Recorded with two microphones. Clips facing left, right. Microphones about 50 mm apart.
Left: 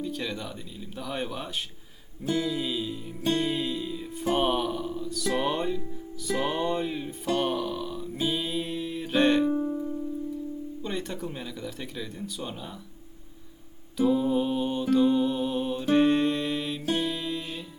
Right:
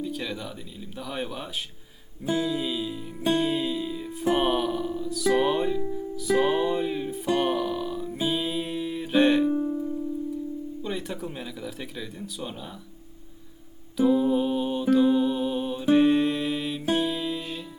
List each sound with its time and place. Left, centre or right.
0.0 s speech: centre
3.2 s music: centre
6.1 s speech: centre
7.3 s music: centre
10.8 s speech: centre
13.9 s music: centre